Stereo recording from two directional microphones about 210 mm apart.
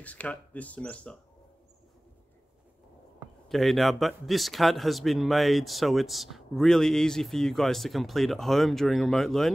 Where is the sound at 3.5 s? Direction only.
Centre (ahead or behind).